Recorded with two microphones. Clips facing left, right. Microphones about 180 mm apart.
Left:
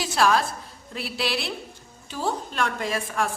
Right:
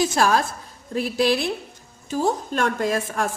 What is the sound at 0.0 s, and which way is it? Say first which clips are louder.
A woman's voice: right 2 dB; 45° right (ahead or behind).